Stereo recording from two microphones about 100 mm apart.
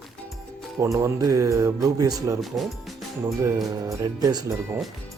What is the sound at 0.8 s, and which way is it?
Speech, 30° right (ahead or behind).